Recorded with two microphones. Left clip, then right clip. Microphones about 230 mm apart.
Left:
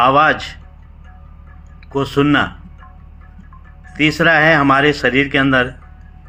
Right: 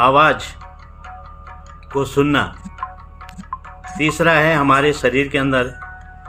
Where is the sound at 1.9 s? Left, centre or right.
Centre.